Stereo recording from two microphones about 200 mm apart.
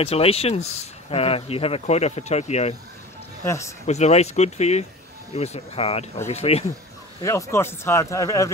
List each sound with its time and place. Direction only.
0.0 s speech: 30° left (ahead or behind)
3.4 s speech: 15° left (ahead or behind)
3.8 s speech: 35° left (ahead or behind)
7.2 s speech: 15° left (ahead or behind)